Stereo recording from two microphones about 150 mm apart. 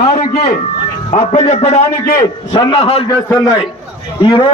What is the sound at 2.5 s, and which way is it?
Speech, 30° left (ahead or behind).